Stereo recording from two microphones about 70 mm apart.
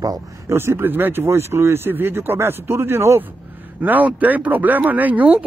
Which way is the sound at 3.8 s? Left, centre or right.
Right.